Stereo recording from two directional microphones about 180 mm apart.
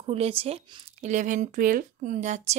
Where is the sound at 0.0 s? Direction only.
30° right (ahead or behind).